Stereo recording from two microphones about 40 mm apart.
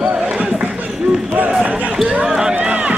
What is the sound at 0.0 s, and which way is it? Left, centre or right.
Basketball bounce, right.